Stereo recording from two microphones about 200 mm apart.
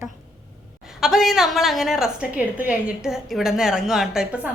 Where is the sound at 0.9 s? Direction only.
Centre (ahead or behind).